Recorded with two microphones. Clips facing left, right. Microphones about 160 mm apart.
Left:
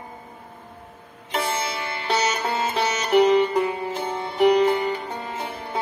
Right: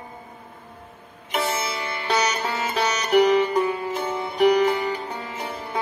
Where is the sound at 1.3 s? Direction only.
30° left (ahead or behind).